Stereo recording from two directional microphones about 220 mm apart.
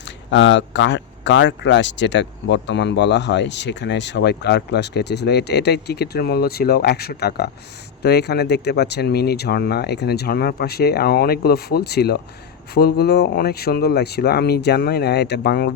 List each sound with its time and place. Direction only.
0.3 s speech: 55° left (ahead or behind)